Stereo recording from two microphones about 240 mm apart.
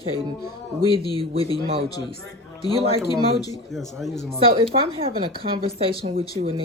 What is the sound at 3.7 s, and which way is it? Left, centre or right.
Speech, centre.